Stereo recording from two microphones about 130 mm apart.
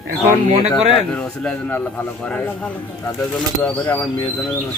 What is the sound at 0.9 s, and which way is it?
A man's voice, 10° left (ahead or behind).